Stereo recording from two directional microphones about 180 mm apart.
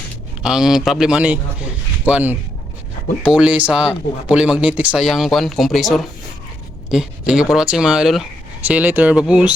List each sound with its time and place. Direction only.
0.4 s speech: 5° right (ahead or behind)